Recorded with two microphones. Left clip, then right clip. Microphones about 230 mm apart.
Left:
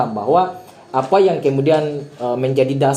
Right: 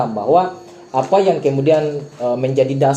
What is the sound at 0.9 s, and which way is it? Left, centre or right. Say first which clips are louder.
Speech: even; left.